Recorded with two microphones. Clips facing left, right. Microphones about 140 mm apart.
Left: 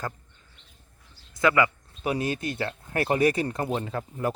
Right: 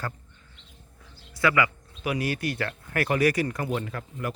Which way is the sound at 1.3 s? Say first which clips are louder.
Left 2 dB; 20° left (ahead or behind).